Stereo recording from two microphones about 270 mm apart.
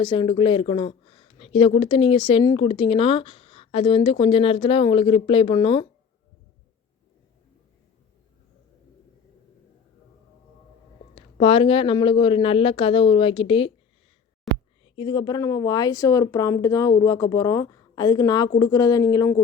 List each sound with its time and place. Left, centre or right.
0.0 s speech: centre
11.1 s speech: left
14.5 s a sound: centre
14.8 s speech: centre